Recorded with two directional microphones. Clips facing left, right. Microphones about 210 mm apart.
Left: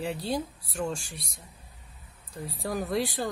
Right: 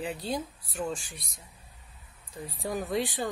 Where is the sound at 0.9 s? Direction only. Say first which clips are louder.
Left 1 dB; 30° left (ahead or behind).